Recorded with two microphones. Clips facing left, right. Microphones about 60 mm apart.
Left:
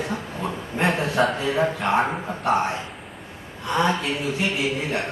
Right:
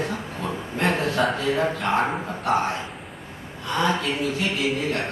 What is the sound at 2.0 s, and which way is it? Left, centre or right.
Speech, centre.